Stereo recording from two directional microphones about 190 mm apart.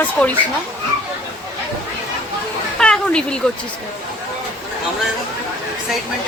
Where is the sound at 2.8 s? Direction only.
5° left (ahead or behind).